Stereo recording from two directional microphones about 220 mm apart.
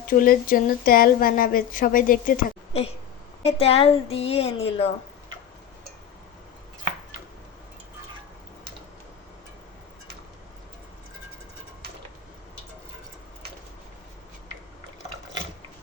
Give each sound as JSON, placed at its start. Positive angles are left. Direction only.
{"t": 0.2, "sound": "a woman's voice", "side_deg": 40}